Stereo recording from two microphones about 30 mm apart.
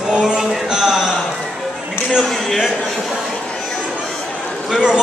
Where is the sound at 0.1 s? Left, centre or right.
Right.